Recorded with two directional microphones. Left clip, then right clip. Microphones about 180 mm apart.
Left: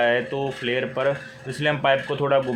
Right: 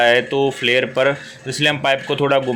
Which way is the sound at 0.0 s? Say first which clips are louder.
Right 7 dB; 15° right (ahead or behind).